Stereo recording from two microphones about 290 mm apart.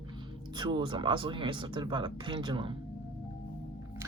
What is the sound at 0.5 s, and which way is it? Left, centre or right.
Speech, centre.